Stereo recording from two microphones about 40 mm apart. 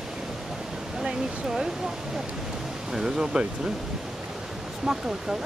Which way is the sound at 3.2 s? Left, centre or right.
Right.